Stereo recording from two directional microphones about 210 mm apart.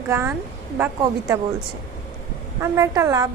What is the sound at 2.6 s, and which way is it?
Speech, 15° right (ahead or behind).